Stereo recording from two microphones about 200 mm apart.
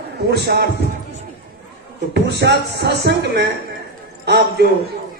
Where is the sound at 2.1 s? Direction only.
55° right (ahead or behind).